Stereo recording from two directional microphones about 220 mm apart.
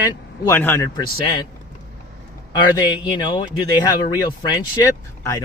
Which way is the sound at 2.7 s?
20° left (ahead or behind).